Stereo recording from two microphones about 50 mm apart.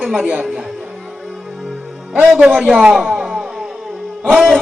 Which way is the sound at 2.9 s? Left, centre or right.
Centre.